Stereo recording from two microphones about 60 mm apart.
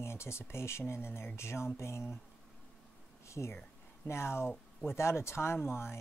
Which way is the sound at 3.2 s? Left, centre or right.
Left.